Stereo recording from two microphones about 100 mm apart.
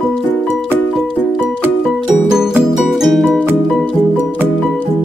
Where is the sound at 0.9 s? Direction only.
Centre (ahead or behind).